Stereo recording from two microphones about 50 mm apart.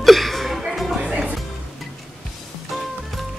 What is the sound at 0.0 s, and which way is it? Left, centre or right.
Chuckle, centre.